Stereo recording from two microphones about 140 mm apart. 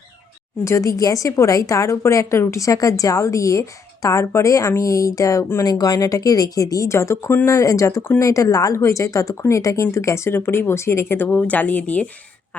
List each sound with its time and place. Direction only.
0.6 s a woman's voice: 20° left (ahead or behind)